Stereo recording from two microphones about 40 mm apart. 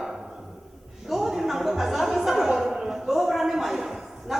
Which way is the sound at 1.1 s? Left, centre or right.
Centre.